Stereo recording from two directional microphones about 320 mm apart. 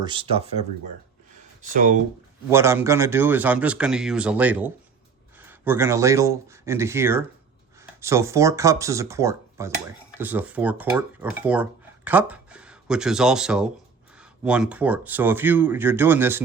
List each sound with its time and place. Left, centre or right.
0.0 s speech: centre
2.5 s speech: centre